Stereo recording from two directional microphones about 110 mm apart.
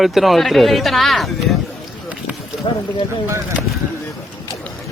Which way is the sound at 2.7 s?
50° left (ahead or behind).